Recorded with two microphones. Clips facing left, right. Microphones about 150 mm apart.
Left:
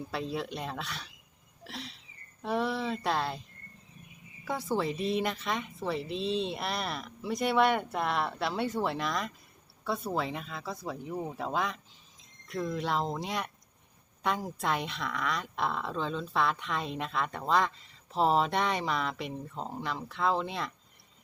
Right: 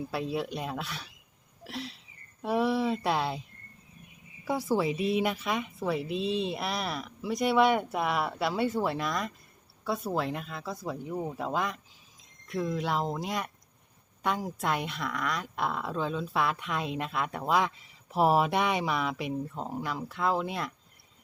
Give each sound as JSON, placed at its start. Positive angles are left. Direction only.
{"t": 0.1, "sound": "speech", "side_deg": -5}
{"t": 4.4, "sound": "speech", "side_deg": -10}